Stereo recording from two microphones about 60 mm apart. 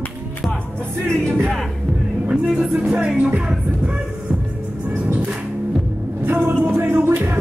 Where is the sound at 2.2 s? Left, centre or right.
Right.